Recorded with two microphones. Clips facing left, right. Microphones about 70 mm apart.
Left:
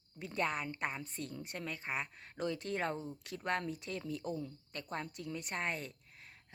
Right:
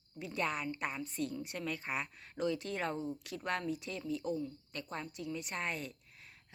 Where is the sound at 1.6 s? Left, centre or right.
Left.